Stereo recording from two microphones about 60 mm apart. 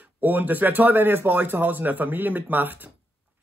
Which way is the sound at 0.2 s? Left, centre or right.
Right.